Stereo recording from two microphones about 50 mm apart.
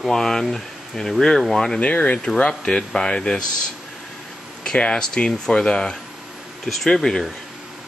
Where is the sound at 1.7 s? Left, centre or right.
Left.